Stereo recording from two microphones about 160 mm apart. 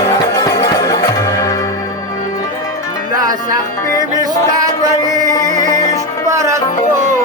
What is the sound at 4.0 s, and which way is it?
Music, 25° right (ahead or behind).